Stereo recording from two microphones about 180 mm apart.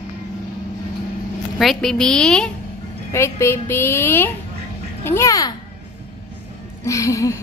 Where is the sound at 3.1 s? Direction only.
15° left (ahead or behind).